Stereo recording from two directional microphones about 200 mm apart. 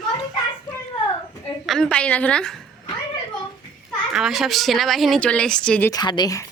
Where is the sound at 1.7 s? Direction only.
5° left (ahead or behind).